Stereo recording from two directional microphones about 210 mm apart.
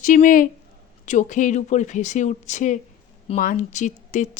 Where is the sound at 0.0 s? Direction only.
40° left (ahead or behind).